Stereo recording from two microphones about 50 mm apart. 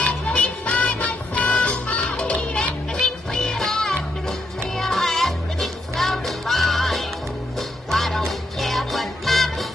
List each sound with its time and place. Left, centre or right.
0.7 s music: left
2.9 s music: centre